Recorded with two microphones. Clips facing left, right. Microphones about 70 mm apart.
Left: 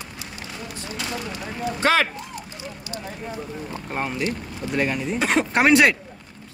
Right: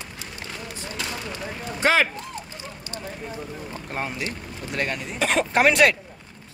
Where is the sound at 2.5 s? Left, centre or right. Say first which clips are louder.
Left 2 dB; right.